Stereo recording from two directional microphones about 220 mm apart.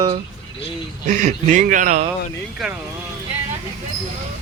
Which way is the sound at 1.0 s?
35° right (ahead or behind).